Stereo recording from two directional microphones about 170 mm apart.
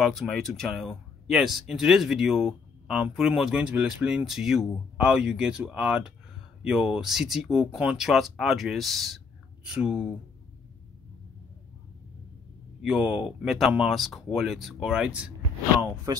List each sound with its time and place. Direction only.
0.0 s speech: centre (ahead or behind)
12.8 s speech: 5° right (ahead or behind)
16.1 s speech: 20° right (ahead or behind)